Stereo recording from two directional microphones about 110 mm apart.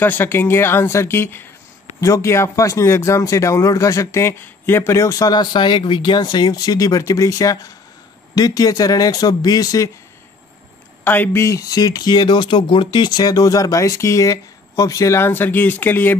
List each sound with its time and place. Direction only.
0.0 s speech: 20° left (ahead or behind)
11.1 s speech: 25° left (ahead or behind)